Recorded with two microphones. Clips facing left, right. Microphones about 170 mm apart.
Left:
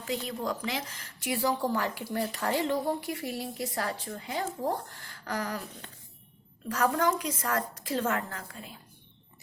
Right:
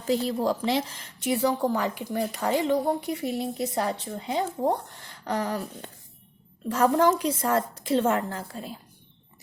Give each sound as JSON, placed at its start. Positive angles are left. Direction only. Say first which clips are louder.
{"t": 0.0, "sound": "speech", "louder": "right 8 dB", "side_deg": -35}
{"t": 6.7, "sound": "speech", "louder": "right 6 dB", "side_deg": -30}